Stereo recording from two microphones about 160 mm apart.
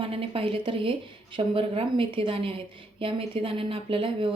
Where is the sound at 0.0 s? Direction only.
35° right (ahead or behind).